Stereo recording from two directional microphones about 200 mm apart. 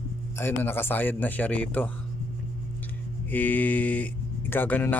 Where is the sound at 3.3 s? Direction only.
10° left (ahead or behind).